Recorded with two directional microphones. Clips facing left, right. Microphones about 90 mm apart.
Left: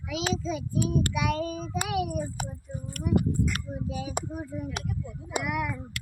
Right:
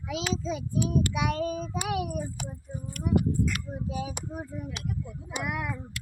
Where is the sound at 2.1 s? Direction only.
50° left (ahead or behind).